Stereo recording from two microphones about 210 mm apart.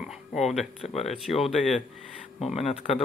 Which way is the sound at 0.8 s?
30° left (ahead or behind).